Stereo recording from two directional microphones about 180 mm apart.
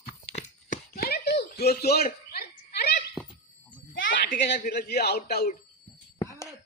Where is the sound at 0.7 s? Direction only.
55° left (ahead or behind).